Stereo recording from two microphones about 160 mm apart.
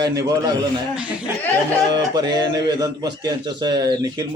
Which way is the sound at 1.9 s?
25° right (ahead or behind).